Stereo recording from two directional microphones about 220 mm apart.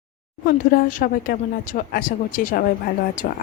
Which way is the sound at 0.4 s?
40° left (ahead or behind).